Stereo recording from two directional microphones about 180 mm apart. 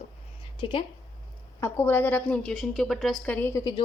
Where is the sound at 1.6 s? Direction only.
10° left (ahead or behind).